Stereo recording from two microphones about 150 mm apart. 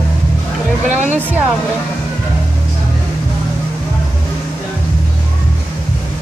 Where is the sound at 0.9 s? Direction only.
50° right (ahead or behind).